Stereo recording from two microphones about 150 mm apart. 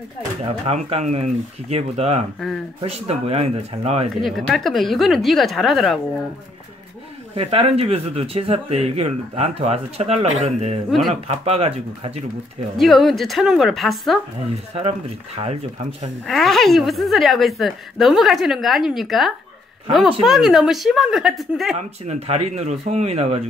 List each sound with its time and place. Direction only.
0.7 s speech: 45° right (ahead or behind)
4.2 s a woman's voice: centre (ahead or behind)
7.3 s speech: 40° right (ahead or behind)
12.7 s a woman's voice: centre (ahead or behind)
14.8 s speech: 40° right (ahead or behind)
16.3 s a woman's voice: centre (ahead or behind)
21.7 s speech: 50° right (ahead or behind)